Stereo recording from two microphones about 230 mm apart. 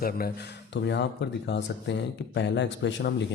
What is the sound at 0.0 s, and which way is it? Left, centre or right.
Speech, left.